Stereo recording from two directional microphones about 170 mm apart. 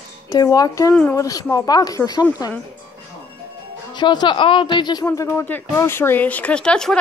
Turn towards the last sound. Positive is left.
turn(degrees=5)  # may be behind; listen again after turning